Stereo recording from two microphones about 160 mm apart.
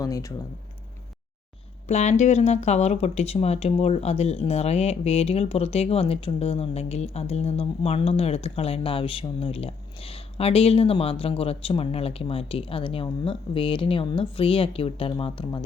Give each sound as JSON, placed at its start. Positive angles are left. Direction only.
{"t": 0.0, "sound": "speech", "side_deg": 20}
{"t": 1.9, "sound": "speech", "side_deg": 45}